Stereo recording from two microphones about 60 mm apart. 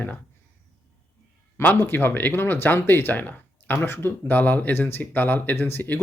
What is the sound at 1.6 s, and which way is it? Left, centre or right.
Speech, left.